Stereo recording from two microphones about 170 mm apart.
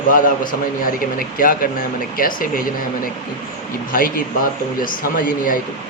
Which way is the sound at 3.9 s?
55° left (ahead or behind).